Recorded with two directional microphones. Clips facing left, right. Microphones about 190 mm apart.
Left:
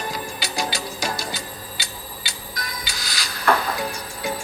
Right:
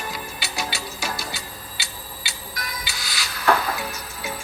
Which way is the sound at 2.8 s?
45° left (ahead or behind).